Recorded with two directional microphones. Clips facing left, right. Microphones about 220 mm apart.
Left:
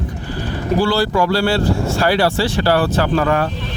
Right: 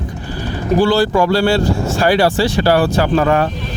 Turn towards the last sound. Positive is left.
turn(degrees=-20)  # may be behind; listen again after turning